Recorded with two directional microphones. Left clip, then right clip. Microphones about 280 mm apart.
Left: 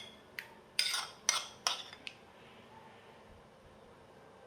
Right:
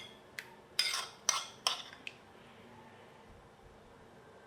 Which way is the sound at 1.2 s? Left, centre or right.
Centre.